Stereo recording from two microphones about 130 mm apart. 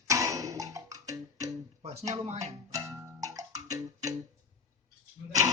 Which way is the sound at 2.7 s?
25° right (ahead or behind).